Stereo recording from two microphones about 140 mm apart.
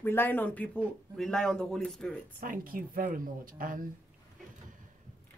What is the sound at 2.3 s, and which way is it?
Speech, 85° right.